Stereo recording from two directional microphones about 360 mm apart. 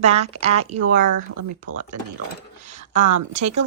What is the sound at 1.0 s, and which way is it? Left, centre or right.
A woman's voice, right.